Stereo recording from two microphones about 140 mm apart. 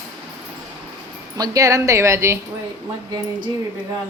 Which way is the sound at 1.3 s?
25° right (ahead or behind).